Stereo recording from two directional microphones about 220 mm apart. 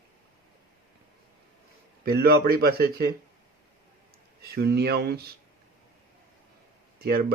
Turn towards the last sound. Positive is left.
turn(degrees=-45)  # may be behind; listen again after turning